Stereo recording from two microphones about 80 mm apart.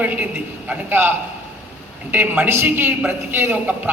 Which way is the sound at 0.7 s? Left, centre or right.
Right.